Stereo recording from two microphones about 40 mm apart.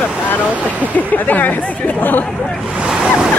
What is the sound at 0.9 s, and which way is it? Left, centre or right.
Speech, left.